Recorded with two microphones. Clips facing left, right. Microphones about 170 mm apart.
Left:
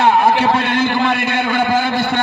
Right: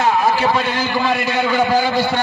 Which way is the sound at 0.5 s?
55° left (ahead or behind).